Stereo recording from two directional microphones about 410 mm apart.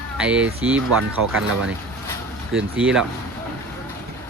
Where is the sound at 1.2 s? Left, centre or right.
Right.